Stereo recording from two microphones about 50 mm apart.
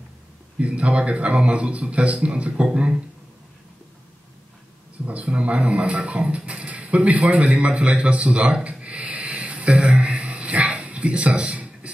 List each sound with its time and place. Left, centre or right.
0.6 s speech: right
5.0 s speech: right
9.0 s a sound: right